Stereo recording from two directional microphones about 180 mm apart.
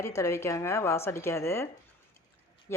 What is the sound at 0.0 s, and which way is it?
Speech, 15° left (ahead or behind).